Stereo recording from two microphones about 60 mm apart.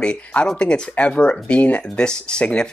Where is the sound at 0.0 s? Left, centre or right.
Centre.